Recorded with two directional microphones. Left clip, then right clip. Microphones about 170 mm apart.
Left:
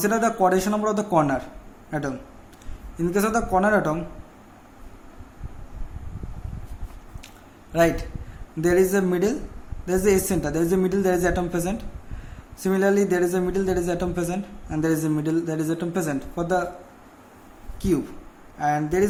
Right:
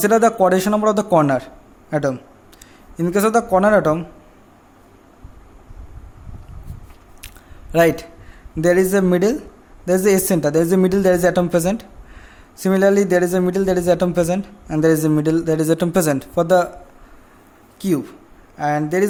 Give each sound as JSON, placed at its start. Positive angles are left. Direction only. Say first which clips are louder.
{"t": 0.0, "sound": "a woman's voice", "louder": "right 7 dB", "side_deg": -50}
{"t": 7.7, "sound": "a woman's voice", "louder": "right 5 dB", "side_deg": -50}
{"t": 17.7, "sound": "a woman's voice", "louder": "right 3 dB", "side_deg": -50}